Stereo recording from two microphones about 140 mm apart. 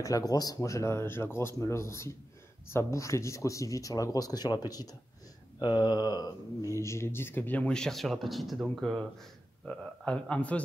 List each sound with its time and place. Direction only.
0.0 s a man's voice: 25° left (ahead or behind); by 10.6 s 10° left (ahead or behind)